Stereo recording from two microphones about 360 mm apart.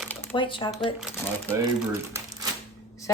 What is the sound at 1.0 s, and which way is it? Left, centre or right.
Speech, centre.